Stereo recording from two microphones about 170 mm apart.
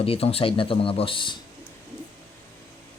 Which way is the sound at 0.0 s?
35° left (ahead or behind).